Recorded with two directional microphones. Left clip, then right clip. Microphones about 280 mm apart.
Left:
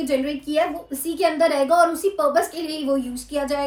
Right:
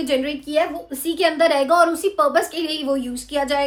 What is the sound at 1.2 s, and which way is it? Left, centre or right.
A woman's voice, centre.